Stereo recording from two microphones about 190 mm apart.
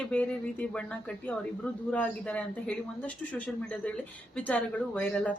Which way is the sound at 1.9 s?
5° left (ahead or behind).